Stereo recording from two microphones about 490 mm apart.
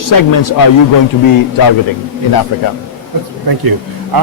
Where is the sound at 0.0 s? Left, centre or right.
Left.